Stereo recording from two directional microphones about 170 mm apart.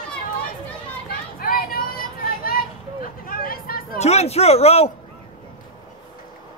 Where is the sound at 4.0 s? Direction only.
40° left (ahead or behind).